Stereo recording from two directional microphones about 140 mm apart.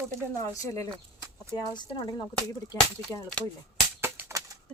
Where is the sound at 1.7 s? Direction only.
30° left (ahead or behind).